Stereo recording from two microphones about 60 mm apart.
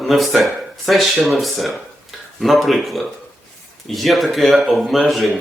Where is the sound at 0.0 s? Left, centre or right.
Centre.